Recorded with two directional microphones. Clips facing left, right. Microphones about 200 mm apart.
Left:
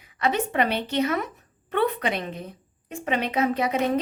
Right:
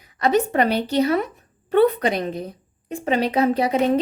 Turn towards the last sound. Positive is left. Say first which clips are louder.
# right 5 dB
turn(degrees=-30)  # may be behind; listen again after turning